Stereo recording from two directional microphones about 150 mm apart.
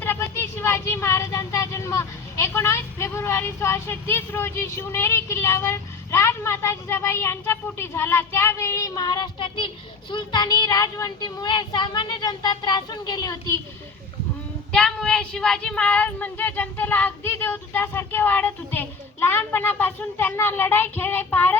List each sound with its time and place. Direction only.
0.0 s speech: 15° left (ahead or behind)
14.7 s speech: 5° left (ahead or behind)